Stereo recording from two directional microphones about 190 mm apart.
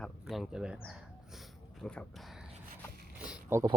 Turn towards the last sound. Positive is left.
turn(degrees=-15)  # may be behind; listen again after turning